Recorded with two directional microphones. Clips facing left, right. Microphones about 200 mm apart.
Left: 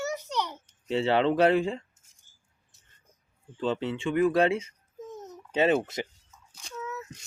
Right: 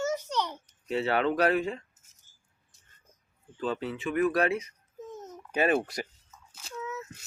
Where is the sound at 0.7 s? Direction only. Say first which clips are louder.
Left 5 dB; 25° left (ahead or behind).